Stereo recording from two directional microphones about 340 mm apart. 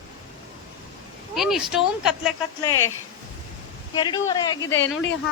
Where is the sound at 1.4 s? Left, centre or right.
Centre.